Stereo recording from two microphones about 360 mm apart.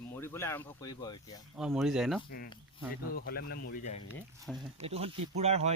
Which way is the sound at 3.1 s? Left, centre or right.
Left.